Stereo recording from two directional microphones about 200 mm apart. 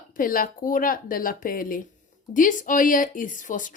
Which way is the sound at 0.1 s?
45° left (ahead or behind).